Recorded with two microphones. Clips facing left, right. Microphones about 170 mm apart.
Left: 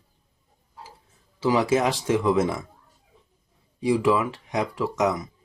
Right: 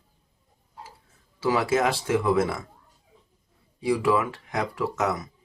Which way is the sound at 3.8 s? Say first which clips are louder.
Left 2 dB; 20° left (ahead or behind).